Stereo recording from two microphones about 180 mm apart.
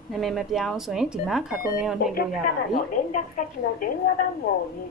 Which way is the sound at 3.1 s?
45° left (ahead or behind).